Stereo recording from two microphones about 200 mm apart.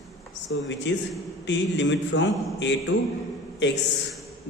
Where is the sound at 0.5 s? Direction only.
65° left (ahead or behind).